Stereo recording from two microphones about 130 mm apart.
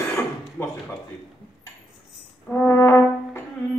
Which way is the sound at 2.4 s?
15° left (ahead or behind).